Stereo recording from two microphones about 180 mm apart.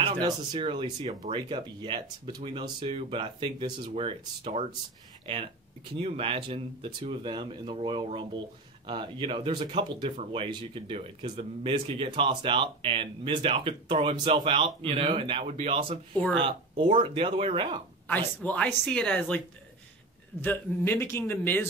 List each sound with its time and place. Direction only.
0.2 s speech: 25° right (ahead or behind)
16.2 s a man's voice: 5° left (ahead or behind)
16.4 s speech: 30° right (ahead or behind)
18.0 s a man's voice: 10° left (ahead or behind)
20.4 s a man's voice: 10° left (ahead or behind)